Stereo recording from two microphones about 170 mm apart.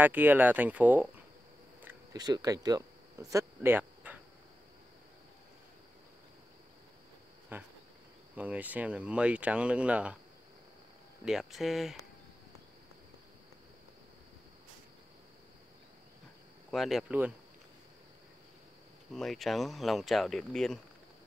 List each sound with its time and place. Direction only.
0.0 s speech: 10° right (ahead or behind)
2.1 s speech: 25° right (ahead or behind)
7.5 s speech: 10° right (ahead or behind)
11.2 s speech: centre (ahead or behind)
16.7 s speech: centre (ahead or behind)
19.1 s speech: centre (ahead or behind)